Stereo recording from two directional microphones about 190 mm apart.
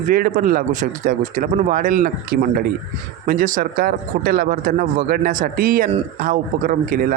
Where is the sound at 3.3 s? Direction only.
45° right (ahead or behind).